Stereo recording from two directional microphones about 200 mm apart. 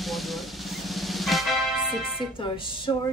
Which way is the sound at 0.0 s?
Centre (ahead or behind).